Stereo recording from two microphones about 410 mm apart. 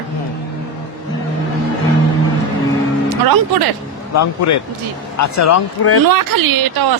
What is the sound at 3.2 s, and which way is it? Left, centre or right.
Speech, right.